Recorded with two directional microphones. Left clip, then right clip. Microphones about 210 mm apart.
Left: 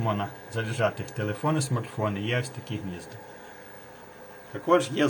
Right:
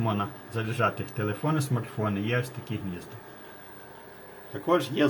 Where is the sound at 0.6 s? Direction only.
Centre (ahead or behind).